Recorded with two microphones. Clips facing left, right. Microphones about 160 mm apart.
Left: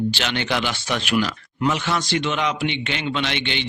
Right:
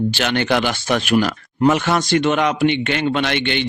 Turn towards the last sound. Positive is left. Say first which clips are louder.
# right 5 dB
turn(degrees=-55)  # may be behind; listen again after turning